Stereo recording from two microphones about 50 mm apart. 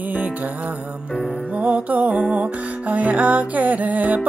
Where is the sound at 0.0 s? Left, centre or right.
Right.